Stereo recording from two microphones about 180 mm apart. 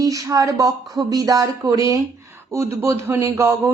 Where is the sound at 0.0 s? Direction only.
20° right (ahead or behind).